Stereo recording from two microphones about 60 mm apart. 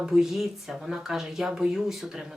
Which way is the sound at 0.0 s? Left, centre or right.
Centre.